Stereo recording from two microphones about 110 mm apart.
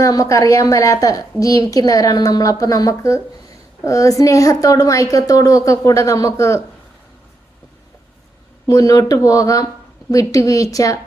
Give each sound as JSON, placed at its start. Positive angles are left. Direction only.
{"t": 0.0, "sound": "a woman's voice", "side_deg": 30}
{"t": 8.6, "sound": "a woman's voice", "side_deg": 35}